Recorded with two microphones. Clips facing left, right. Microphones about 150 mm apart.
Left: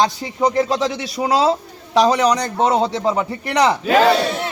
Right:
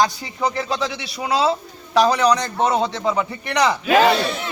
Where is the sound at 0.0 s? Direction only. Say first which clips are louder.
Left 2 dB; 25° left (ahead or behind).